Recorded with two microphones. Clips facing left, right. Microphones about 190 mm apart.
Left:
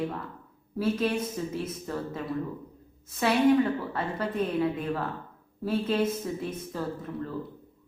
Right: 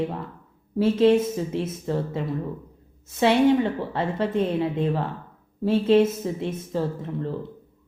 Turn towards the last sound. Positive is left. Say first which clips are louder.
# right 5 dB
turn(degrees=-25)  # may be behind; listen again after turning